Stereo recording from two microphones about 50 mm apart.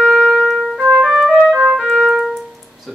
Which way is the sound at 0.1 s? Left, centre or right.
Centre.